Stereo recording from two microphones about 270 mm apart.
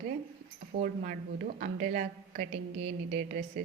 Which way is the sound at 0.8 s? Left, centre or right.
Right.